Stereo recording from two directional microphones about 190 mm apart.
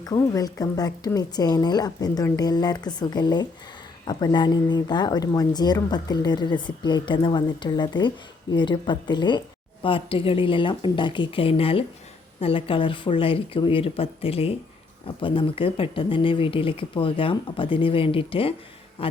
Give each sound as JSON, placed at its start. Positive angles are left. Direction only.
{"t": 0.0, "sound": "a man's voice", "side_deg": 20}